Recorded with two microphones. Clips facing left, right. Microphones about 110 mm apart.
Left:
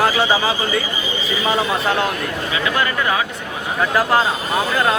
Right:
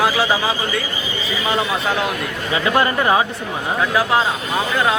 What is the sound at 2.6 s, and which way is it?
Speech, 30° right (ahead or behind).